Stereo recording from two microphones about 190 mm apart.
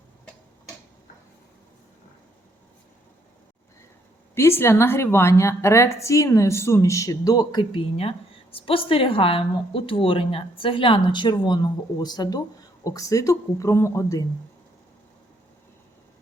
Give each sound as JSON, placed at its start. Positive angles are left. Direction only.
{"t": 4.4, "sound": "a woman's voice", "side_deg": 15}